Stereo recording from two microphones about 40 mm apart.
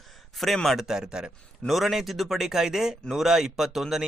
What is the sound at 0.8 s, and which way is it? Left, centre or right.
A man's voice, centre.